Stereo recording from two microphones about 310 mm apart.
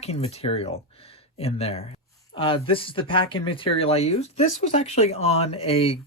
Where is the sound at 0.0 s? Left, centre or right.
Centre.